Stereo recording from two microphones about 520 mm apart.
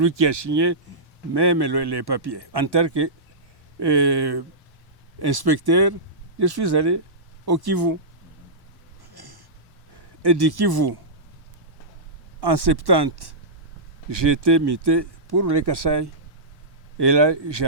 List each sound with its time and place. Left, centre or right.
0.0 s speech: right
9.1 s a sound: right
10.2 s speech: right
12.4 s speech: right